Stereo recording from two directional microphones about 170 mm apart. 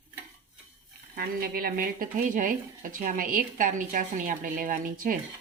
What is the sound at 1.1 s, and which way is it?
Speech, 60° right (ahead or behind).